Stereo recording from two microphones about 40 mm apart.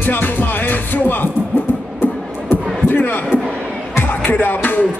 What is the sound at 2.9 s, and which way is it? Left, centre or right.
Speech, left.